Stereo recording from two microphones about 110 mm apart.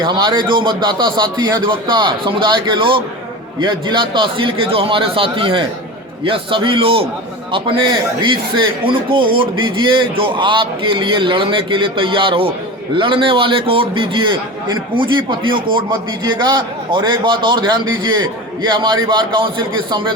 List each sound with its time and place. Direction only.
0.0 s a man's voice: 40° right (ahead or behind)